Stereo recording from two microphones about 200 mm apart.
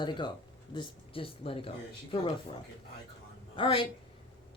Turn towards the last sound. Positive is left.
turn(degrees=25)  # may be behind; listen again after turning